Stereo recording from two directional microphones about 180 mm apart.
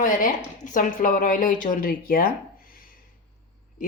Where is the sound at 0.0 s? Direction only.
45° left (ahead or behind).